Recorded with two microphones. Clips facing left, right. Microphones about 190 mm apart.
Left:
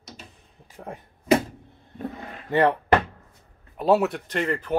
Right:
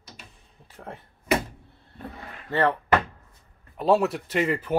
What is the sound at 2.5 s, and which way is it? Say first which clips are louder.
Speech: left 3 dB; 15° left (ahead or behind).